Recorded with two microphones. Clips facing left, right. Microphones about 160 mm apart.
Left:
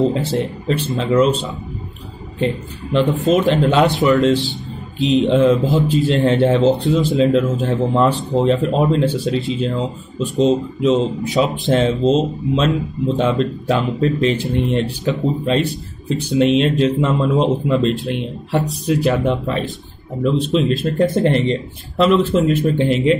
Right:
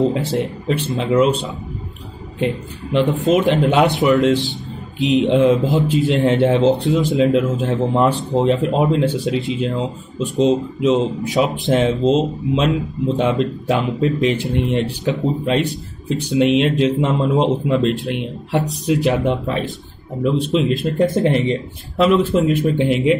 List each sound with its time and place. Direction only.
0.1 s speech: 5° right (ahead or behind)
1.2 s speech: 20° right (ahead or behind)
14.0 s speech: 5° right (ahead or behind)
14.3 s speech: 15° right (ahead or behind)
21.0 s speech: 5° right (ahead or behind)